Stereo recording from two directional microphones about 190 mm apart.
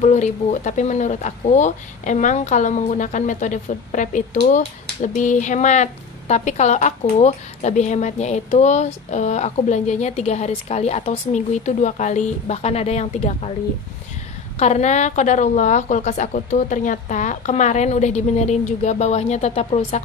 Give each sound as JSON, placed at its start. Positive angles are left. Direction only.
{"t": 0.0, "sound": "speech", "side_deg": 40}
{"t": 14.6, "sound": "speech", "side_deg": 35}